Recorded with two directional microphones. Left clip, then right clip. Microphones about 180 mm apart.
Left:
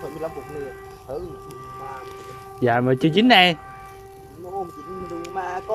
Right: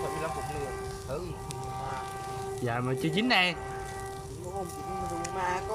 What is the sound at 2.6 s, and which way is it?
Speech, 50° left (ahead or behind).